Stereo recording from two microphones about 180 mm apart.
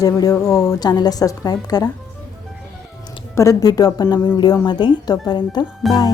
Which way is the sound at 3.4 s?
20° left (ahead or behind).